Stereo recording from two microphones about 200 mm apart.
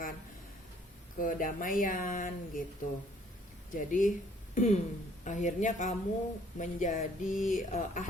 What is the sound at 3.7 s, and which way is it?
Speech, 40° left (ahead or behind).